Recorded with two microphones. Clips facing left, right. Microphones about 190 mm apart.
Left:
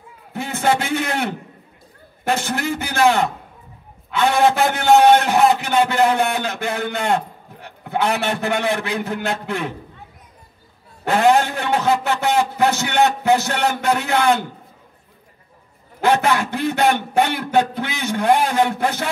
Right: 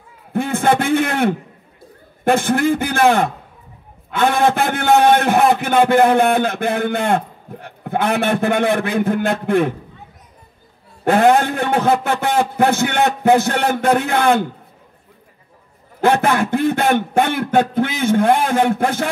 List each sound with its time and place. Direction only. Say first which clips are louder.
0.3 s a man's voice: right 4 dB; 55° right (ahead or behind)
11.1 s a man's voice: right 3 dB; 55° right (ahead or behind)
16.0 s a man's voice: right 2 dB; 50° right (ahead or behind)